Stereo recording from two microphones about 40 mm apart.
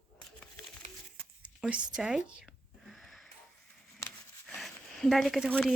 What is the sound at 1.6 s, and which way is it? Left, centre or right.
Speech, centre.